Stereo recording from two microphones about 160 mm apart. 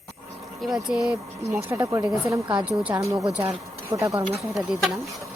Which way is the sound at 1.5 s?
20° right (ahead or behind).